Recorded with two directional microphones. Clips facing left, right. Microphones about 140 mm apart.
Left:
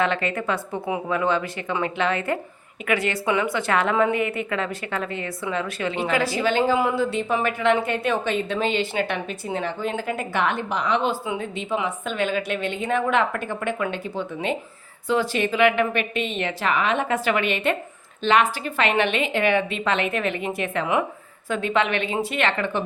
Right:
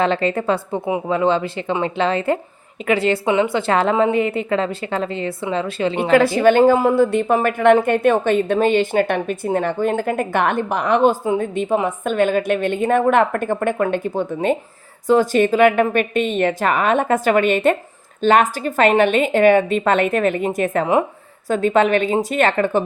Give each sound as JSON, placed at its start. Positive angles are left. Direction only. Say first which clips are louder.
{"t": 0.0, "sound": "a woman's voice", "louder": "right 5 dB", "side_deg": -30}
{"t": 6.1, "sound": "a woman's voice", "louder": "right 10 dB", "side_deg": -55}